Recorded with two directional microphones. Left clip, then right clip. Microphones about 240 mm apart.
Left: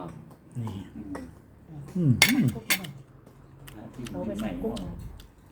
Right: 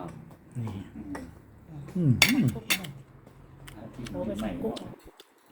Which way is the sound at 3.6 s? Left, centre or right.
Centre.